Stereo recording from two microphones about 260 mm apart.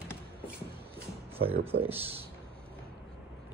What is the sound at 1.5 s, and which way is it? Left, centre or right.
Speech, right.